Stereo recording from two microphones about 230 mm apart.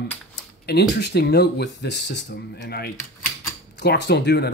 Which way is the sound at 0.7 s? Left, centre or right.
Left.